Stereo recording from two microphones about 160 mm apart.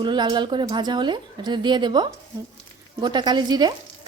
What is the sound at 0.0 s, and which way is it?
Speech, 30° right (ahead or behind).